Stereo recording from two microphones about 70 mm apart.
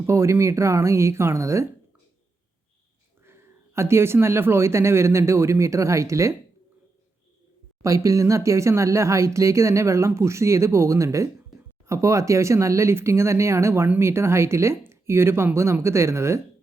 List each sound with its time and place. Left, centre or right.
0.0 s speech: right
3.2 s speech: right
7.8 s speech: right